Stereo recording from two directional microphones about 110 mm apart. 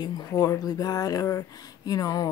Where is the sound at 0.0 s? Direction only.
35° left (ahead or behind).